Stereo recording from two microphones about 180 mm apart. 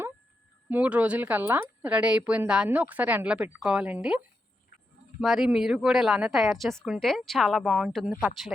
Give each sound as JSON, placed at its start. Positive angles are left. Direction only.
{"t": 0.7, "sound": "a woman's voice", "side_deg": -5}
{"t": 5.2, "sound": "a woman's voice", "side_deg": 0}